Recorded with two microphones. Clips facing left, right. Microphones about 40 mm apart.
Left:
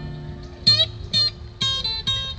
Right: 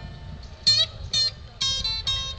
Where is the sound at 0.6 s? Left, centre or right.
Left.